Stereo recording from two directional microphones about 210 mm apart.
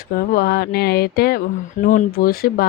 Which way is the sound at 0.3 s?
45° left (ahead or behind).